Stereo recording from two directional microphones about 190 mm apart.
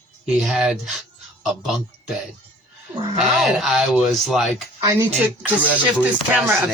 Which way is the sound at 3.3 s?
Centre (ahead or behind).